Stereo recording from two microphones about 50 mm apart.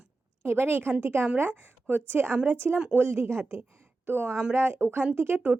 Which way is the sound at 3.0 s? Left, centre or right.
Right.